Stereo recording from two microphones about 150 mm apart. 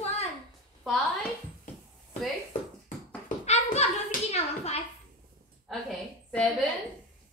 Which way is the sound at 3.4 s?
45° left (ahead or behind).